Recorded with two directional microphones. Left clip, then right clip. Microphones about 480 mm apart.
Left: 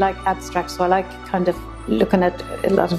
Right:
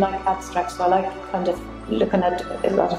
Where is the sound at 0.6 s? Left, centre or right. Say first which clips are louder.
Left 1 dB; left.